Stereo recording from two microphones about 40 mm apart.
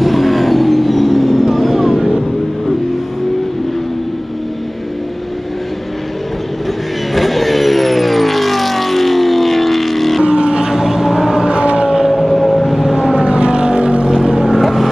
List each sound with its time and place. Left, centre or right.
0.0 s vehicle: centre
7.2 s vehicle: centre
10.2 s boat: right
11.4 s vehicle: right
12.1 s vehicle: centre
13.1 s vehicle: right
14.1 s vehicle: centre